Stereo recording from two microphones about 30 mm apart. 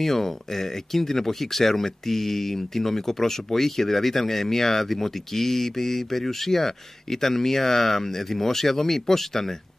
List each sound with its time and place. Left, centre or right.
0.0 s speech: centre